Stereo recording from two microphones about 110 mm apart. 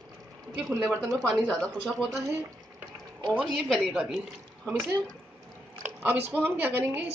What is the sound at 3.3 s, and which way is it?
Speech, 5° right (ahead or behind).